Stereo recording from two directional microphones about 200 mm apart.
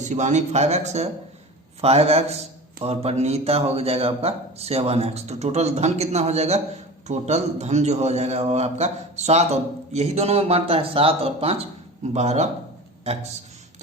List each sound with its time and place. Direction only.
0.0 s a man's voice: 35° right (ahead or behind)